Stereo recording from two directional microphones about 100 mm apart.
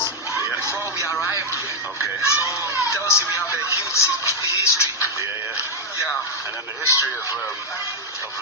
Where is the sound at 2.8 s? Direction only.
30° left (ahead or behind).